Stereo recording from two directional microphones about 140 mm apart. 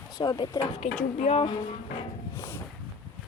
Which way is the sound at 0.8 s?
55° left (ahead or behind).